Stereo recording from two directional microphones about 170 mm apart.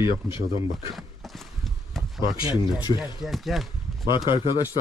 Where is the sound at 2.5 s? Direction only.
25° left (ahead or behind).